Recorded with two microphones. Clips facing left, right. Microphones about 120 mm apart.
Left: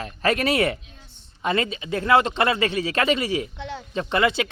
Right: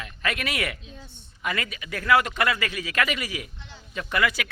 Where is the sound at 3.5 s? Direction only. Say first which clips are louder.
Left 14 dB; 70° left (ahead or behind).